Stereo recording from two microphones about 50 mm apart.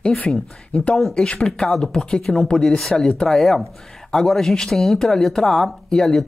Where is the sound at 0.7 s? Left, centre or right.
Left.